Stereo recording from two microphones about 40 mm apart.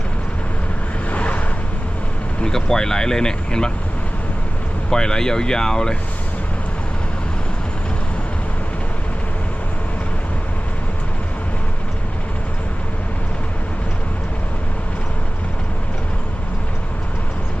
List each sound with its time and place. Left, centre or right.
1.1 s vehicle: left
2.4 s speech: centre
4.9 s speech: centre